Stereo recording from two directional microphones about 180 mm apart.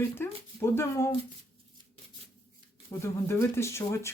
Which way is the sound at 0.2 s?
10° left (ahead or behind).